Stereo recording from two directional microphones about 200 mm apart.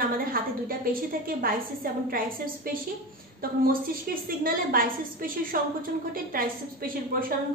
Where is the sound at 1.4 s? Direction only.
45° right (ahead or behind).